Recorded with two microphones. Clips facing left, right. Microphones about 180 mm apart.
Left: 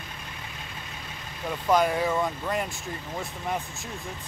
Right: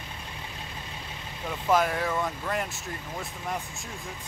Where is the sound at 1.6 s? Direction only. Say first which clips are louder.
Left 2 dB; centre (ahead or behind).